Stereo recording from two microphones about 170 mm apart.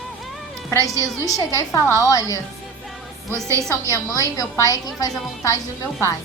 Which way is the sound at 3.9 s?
20° left (ahead or behind).